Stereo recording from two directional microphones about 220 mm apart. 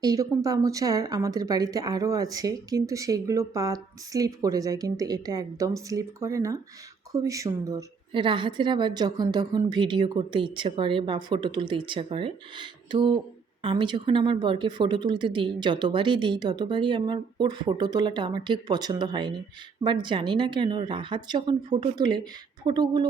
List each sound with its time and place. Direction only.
0.0 s a woman's voice: 15° right (ahead or behind)